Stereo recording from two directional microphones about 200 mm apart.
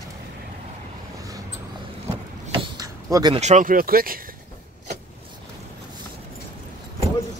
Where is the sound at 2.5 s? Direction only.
20° right (ahead or behind).